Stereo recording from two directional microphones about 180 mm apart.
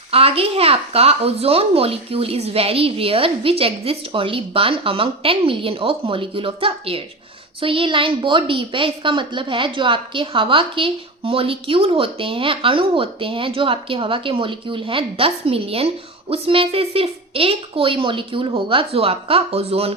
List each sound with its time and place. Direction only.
0.1 s a child's voice: 30° right (ahead or behind)